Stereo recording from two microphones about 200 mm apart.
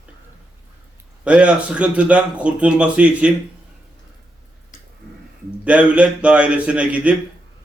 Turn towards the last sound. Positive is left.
turn(degrees=-5)  # may be behind; listen again after turning